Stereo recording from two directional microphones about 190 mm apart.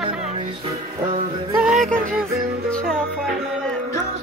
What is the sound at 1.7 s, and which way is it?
Music, 40° right (ahead or behind).